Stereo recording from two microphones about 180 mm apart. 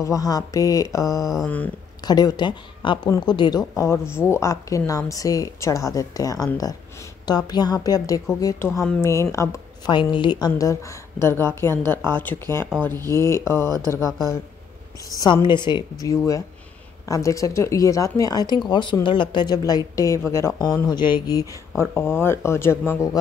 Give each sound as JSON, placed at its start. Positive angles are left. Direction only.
{"t": 0.0, "sound": "speech", "side_deg": 20}
{"t": 1.2, "sound": "a sound", "side_deg": 0}
{"t": 2.0, "sound": "a woman's voice", "side_deg": 20}
{"t": 13.7, "sound": "speech", "side_deg": -20}
{"t": 15.1, "sound": "a woman's voice", "side_deg": 25}